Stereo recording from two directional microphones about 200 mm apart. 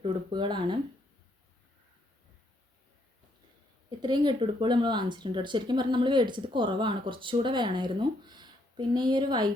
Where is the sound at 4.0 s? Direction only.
25° right (ahead or behind).